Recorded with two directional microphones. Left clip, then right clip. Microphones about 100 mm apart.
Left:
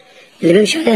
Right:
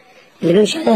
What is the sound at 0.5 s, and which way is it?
Speech, 10° left (ahead or behind).